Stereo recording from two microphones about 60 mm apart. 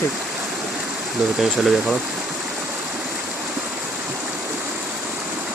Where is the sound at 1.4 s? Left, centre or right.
Centre.